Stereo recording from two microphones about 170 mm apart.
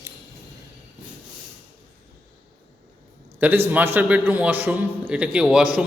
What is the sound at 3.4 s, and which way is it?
A man's voice, 10° right (ahead or behind).